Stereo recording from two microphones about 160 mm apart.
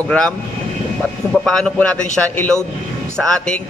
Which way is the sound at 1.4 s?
5° left (ahead or behind).